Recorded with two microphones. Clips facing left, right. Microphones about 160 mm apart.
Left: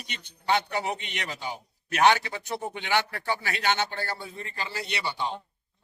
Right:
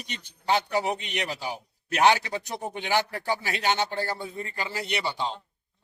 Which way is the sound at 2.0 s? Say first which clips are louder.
Even; 35° right (ahead or behind).